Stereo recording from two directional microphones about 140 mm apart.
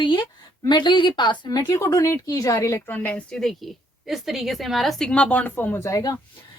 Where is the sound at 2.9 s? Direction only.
10° left (ahead or behind).